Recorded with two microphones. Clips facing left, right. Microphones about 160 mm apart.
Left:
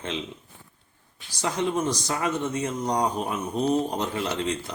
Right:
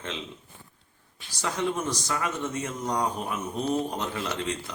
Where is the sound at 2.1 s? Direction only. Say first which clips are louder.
Left 3 dB; 30° left (ahead or behind).